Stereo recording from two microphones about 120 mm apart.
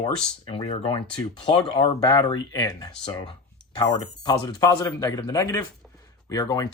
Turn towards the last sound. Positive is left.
turn(degrees=30)  # may be behind; listen again after turning